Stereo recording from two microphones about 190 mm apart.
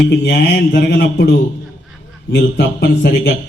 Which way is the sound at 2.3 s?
60° left (ahead or behind).